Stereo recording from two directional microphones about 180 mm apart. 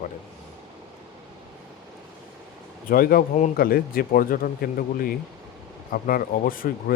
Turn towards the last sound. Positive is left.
turn(degrees=50)  # may be behind; listen again after turning